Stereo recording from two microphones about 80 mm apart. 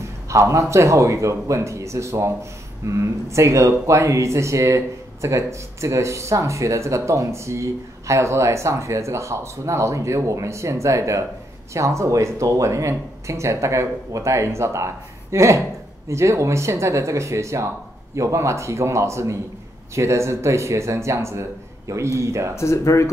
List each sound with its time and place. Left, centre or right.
0.0 s speech: right
22.6 s speech: left